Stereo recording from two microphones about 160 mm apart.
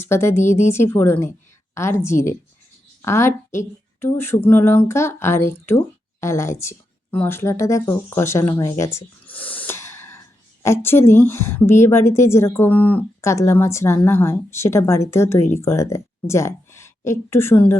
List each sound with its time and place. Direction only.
0.0 s a woman's voice: 15° left (ahead or behind)